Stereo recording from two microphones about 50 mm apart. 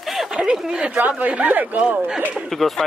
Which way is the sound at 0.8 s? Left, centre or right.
Right.